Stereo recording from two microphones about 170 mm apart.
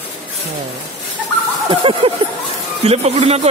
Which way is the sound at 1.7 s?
30° right (ahead or behind).